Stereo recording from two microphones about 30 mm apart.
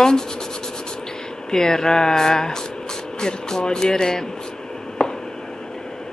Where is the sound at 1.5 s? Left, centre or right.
Centre.